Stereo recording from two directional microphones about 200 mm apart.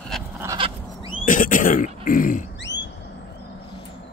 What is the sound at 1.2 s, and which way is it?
Speech, 40° left (ahead or behind).